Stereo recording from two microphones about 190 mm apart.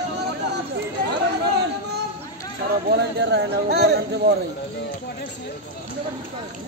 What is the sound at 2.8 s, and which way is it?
Speech, 60° right (ahead or behind).